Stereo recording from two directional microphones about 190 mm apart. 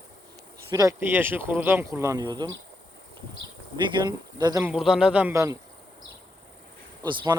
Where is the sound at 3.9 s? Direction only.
20° right (ahead or behind).